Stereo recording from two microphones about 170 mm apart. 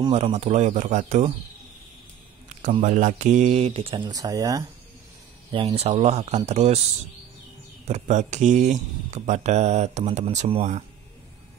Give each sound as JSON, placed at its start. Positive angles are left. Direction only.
{"t": 0.1, "sound": "speech", "side_deg": -40}
{"t": 2.8, "sound": "speech", "side_deg": -45}
{"t": 5.5, "sound": "speech", "side_deg": -30}
{"t": 7.8, "sound": "speech", "side_deg": -45}